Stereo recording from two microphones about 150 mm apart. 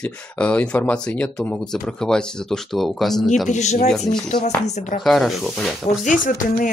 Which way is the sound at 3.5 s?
50° left (ahead or behind).